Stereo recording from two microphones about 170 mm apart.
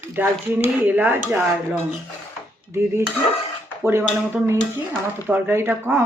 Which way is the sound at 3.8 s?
15° right (ahead or behind).